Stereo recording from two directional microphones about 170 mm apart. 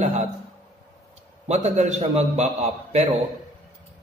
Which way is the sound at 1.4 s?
40° right (ahead or behind).